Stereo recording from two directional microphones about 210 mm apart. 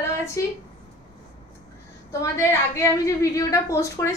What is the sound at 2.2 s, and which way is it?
A woman's voice, 15° left (ahead or behind).